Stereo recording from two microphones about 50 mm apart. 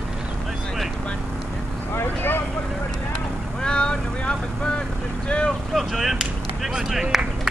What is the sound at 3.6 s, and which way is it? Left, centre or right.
Vehicle, centre.